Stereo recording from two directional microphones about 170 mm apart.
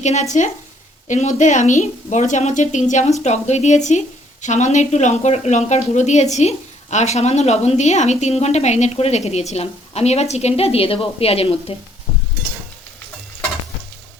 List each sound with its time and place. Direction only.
0.0 s a woman's voice: 45° left (ahead or behind)